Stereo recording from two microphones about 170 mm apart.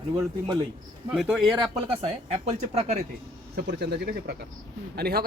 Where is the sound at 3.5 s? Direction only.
75° right (ahead or behind).